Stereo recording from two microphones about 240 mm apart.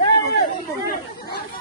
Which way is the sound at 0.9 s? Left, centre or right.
Left.